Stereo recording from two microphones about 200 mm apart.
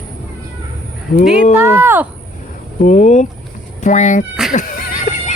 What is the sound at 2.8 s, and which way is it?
Speech, 35° left (ahead or behind).